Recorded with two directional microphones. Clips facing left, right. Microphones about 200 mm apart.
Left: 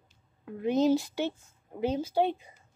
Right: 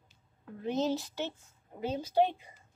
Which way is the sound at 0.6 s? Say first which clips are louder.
Left 7 dB; 15° left (ahead or behind).